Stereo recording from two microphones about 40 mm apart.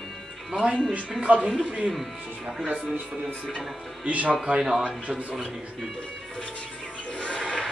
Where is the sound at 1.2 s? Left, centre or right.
Right.